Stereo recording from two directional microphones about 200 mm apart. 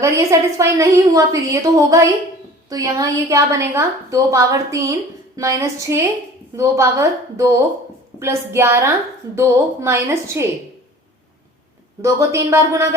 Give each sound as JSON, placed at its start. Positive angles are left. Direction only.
{"t": 0.0, "sound": "a woman's voice", "side_deg": -15}
{"t": 12.0, "sound": "a woman's voice", "side_deg": -15}